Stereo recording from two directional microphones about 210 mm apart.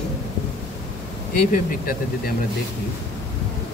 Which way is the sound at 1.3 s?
40° left (ahead or behind).